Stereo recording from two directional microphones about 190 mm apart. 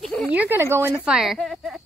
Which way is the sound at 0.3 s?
10° right (ahead or behind).